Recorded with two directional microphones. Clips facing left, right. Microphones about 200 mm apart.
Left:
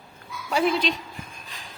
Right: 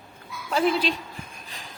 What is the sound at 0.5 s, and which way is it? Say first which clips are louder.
Speech: even; 5° right (ahead or behind).